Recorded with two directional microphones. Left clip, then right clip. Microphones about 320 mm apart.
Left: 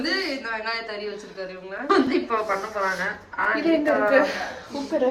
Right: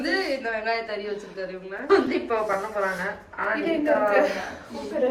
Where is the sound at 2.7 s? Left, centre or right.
Centre.